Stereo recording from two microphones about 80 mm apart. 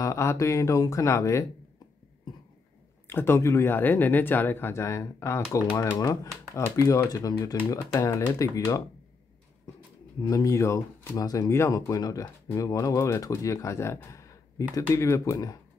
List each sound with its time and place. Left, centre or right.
0.0 s speech: left
3.1 s speech: left
5.9 s speech: left
6.6 s speech: left
7.1 s speech: left
10.2 s speech: left
15.3 s speech: left